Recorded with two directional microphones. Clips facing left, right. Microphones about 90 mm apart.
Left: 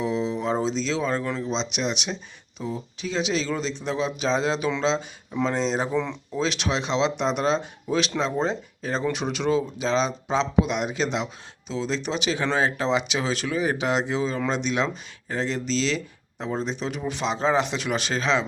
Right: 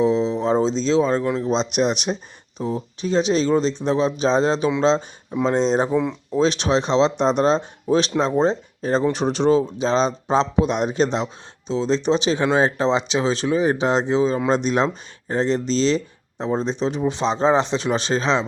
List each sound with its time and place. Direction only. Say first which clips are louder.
0.0 s a sound: right 7 dB; 30° right (ahead or behind)
1.4 s speech: right 7 dB; 45° right (ahead or behind)
5.9 s speech: right 5 dB; 15° right (ahead or behind)
6.3 s speech: right 7 dB; 35° right (ahead or behind)
14.5 s speech: right 6 dB; 40° right (ahead or behind)